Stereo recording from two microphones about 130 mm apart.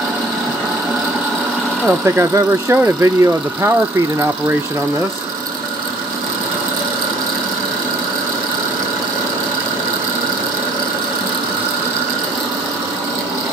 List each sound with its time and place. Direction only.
1.9 s speech: 20° right (ahead or behind)